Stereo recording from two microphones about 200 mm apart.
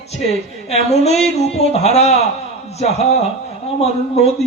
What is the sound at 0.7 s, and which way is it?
Speech, 30° left (ahead or behind).